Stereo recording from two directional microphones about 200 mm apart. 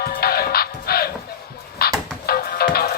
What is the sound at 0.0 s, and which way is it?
Music, 50° left (ahead or behind).